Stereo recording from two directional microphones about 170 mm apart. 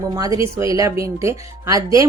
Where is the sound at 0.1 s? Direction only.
20° right (ahead or behind).